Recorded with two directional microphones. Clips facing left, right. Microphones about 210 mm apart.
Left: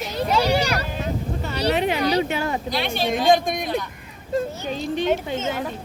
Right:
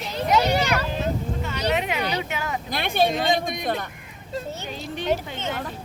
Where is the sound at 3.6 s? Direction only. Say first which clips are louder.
Left 1 dB; 55° right (ahead or behind).